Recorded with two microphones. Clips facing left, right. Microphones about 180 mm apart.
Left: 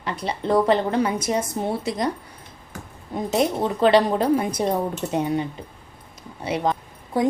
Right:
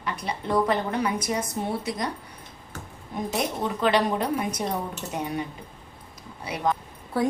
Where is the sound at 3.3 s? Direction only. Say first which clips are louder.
Left 7 dB; 30° left (ahead or behind).